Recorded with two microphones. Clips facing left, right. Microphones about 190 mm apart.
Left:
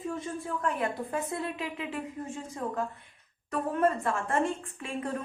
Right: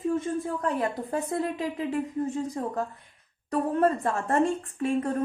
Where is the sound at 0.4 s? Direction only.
35° right (ahead or behind).